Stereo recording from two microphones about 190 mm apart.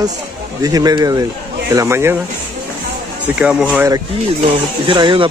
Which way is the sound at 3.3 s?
5° right (ahead or behind).